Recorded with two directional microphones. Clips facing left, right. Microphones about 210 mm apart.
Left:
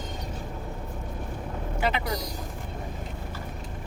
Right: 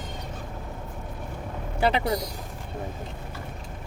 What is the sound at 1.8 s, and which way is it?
Vehicle, 35° right (ahead or behind).